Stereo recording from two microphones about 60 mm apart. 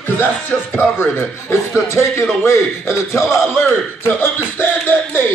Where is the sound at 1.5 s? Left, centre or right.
Left.